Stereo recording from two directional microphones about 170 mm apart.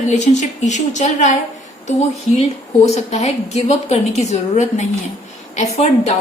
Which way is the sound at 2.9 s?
40° left (ahead or behind).